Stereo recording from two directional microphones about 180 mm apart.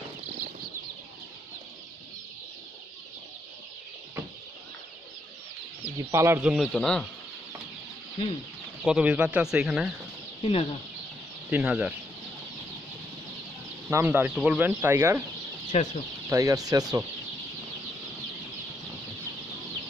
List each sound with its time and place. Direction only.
5.9 s speech: 15° right (ahead or behind)
6.5 s speech: 5° left (ahead or behind)
8.8 s speech: 5° right (ahead or behind)
10.4 s speech: 30° left (ahead or behind)
11.5 s speech: 5° right (ahead or behind)
13.8 s speech: 10° right (ahead or behind)
15.7 s speech: 40° left (ahead or behind)
16.3 s speech: 20° right (ahead or behind)